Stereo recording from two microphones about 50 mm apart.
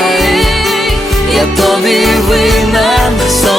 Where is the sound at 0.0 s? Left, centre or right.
Centre.